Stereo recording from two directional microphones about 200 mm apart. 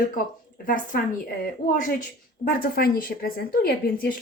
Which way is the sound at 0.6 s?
40° left (ahead or behind).